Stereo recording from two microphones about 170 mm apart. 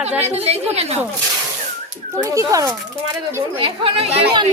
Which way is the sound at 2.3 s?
20° right (ahead or behind).